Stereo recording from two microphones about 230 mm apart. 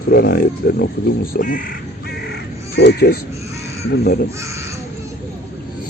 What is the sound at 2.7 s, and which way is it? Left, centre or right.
Speech, left.